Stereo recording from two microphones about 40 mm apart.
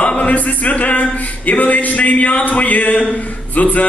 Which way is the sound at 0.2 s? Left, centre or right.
Left.